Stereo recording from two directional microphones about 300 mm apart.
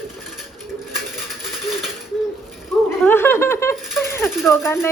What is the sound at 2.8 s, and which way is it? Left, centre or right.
Speech, centre.